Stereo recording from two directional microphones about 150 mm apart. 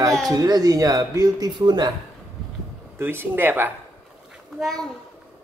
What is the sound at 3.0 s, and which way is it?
Speech, 15° right (ahead or behind).